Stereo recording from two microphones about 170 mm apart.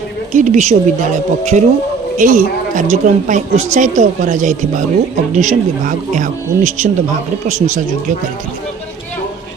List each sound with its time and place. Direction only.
0.3 s a woman's voice: 45° right (ahead or behind)